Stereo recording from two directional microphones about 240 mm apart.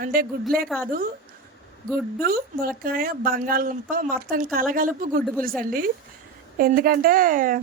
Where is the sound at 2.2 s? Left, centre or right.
Right.